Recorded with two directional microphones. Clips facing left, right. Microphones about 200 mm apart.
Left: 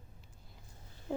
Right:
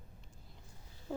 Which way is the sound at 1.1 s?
20° left (ahead or behind).